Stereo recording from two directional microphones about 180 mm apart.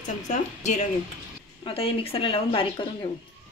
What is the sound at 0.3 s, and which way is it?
A woman's voice, 40° left (ahead or behind).